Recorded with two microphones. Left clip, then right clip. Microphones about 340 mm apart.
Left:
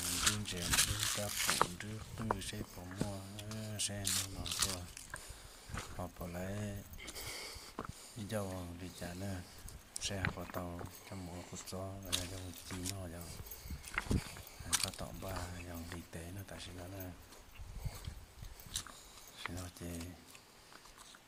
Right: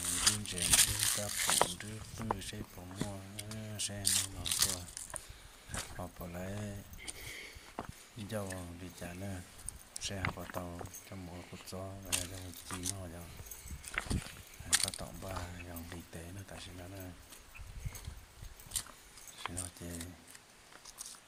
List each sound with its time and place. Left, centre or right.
0.0 s crumpling: centre
3.1 s speech: centre
7.3 s a sound: centre
7.8 s speech: centre
14.7 s speech: centre
19.4 s speech: centre